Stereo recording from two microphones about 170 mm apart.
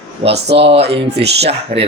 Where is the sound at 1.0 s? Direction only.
80° right.